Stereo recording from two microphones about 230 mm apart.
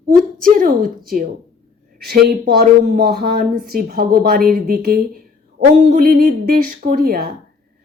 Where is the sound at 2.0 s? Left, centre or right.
Right.